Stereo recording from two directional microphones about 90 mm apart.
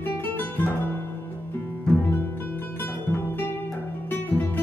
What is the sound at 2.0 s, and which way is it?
Music, 25° left (ahead or behind).